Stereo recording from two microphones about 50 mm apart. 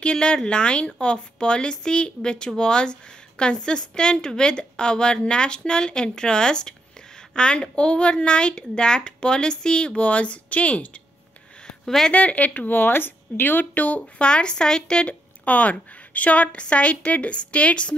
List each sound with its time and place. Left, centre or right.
0.0 s a woman's voice: centre
11.6 s a sound: centre
12.1 s a woman's voice: left
15.4 s a woman's voice: left